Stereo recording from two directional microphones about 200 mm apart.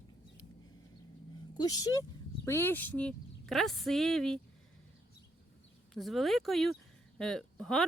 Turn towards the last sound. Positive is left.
turn(degrees=0)  # may be behind; listen again after turning